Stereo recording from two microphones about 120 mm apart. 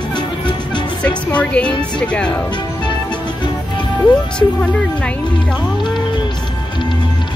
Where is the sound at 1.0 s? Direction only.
10° left (ahead or behind).